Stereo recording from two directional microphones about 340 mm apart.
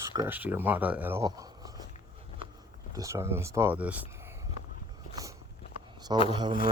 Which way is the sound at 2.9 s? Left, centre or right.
Centre.